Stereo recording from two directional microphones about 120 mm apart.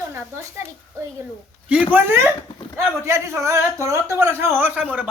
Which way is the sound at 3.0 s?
25° right (ahead or behind).